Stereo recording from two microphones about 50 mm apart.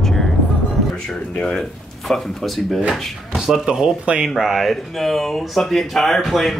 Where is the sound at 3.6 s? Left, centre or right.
Centre.